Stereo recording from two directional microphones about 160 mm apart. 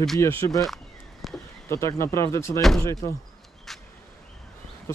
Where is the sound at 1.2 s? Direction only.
Centre (ahead or behind).